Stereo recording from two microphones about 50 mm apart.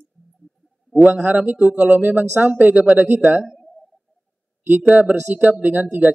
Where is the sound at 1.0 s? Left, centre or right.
Right.